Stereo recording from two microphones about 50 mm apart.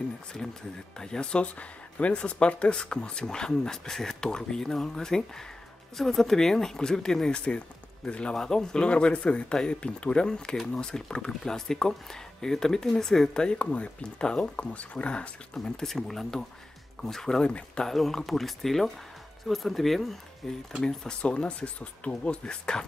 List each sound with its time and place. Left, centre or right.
0.9 s speech: centre
15.5 s speech: centre
17.4 s speech: centre
17.8 s speech: centre